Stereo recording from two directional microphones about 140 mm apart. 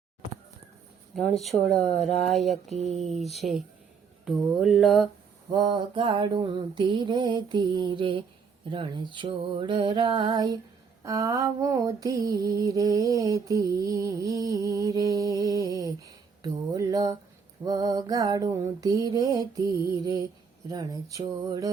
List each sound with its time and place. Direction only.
1.1 s mantra: centre (ahead or behind)
2.7 s speech: 55° right (ahead or behind)
3.1 s mantra: centre (ahead or behind)
5.5 s mantra: 30° right (ahead or behind)